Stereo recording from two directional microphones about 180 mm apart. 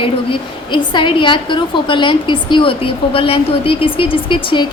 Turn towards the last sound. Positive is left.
turn(degrees=25)  # may be behind; listen again after turning